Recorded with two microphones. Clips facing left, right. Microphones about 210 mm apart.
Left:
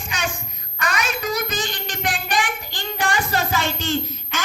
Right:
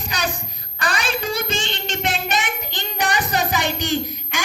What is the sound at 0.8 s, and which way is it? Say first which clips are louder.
Child singing: right 1 dB; 35° right (ahead or behind).